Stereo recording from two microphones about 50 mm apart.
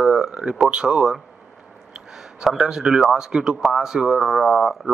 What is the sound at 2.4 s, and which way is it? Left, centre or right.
Speech, centre.